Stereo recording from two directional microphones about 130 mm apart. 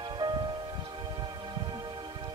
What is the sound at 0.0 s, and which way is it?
Music, 35° right (ahead or behind).